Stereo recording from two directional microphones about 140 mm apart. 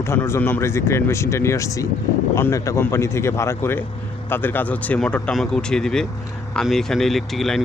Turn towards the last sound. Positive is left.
turn(degrees=0)  # may be behind; listen again after turning